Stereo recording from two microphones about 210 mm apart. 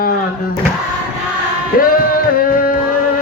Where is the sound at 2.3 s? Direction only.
45° left (ahead or behind).